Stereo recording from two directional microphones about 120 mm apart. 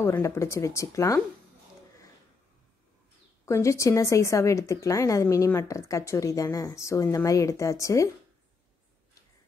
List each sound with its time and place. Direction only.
0.0 s speech: 20° left (ahead or behind)
3.4 s speech: 25° left (ahead or behind)